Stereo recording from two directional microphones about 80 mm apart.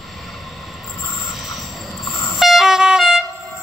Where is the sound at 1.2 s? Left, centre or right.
Centre.